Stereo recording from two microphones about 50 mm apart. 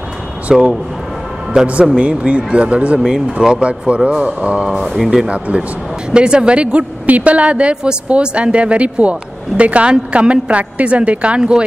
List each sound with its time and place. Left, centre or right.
0.5 s speech: centre
2.0 s a woman's voice: right
4.7 s speech: centre
5.2 s a woman's voice: right